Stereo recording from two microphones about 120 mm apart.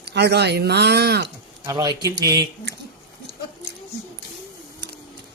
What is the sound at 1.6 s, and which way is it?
Speech, 35° right (ahead or behind).